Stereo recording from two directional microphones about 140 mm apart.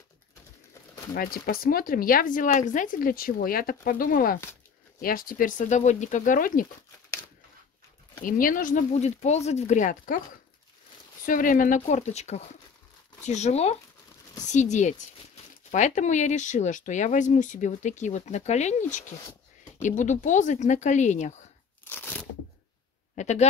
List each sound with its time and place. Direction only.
1.1 s speech: 90° left
8.2 s speech: 80° left
8.9 s speech: 50° left (ahead or behind); by 10.2 s 70° left (ahead or behind)
11.2 s speech: 75° left (ahead or behind); by 21.5 s 55° left (ahead or behind)
21.8 s crunch: 15° left (ahead or behind)
23.1 s speech: 55° left (ahead or behind)